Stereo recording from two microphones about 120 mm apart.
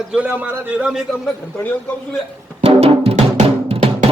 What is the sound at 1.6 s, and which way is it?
Speech, 15° left (ahead or behind).